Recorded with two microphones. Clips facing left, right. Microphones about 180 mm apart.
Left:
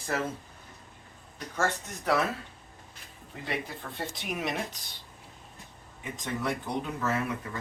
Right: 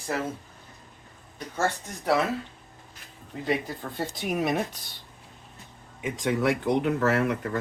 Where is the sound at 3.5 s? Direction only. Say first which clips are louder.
Right 7 dB; 40° right (ahead or behind).